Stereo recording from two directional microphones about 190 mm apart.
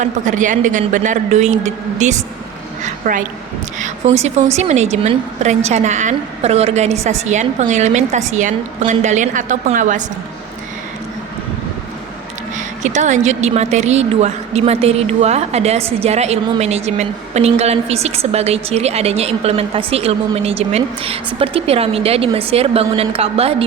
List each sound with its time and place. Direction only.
0.0 s a woman's voice: 40° right (ahead or behind)
12.5 s a woman's voice: 40° right (ahead or behind)